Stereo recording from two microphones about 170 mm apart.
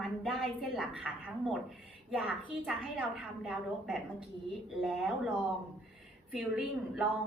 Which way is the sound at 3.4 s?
Centre (ahead or behind).